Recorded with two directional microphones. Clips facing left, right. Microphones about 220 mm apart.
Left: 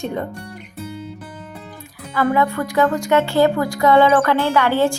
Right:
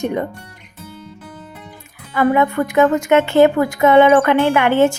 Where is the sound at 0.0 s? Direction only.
15° right (ahead or behind).